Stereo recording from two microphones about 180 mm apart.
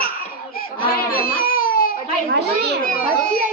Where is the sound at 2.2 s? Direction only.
65° right (ahead or behind).